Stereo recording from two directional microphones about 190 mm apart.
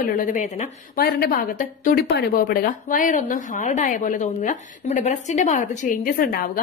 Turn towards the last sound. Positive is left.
turn(degrees=50)  # may be behind; listen again after turning